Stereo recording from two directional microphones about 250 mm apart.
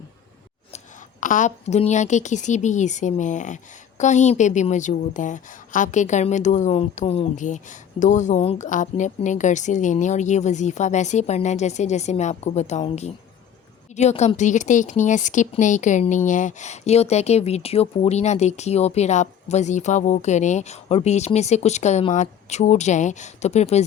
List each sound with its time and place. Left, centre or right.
1.2 s a woman's voice: left